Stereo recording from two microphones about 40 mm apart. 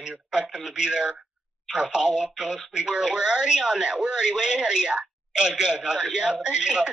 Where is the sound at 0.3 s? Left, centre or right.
Right.